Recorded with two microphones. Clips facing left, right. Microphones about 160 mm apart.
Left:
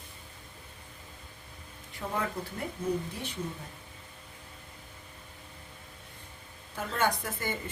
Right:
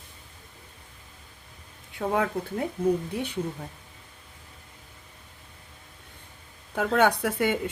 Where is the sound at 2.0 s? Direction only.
70° right (ahead or behind).